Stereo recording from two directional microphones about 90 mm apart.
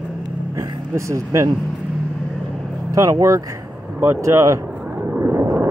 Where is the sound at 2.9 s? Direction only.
35° right (ahead or behind).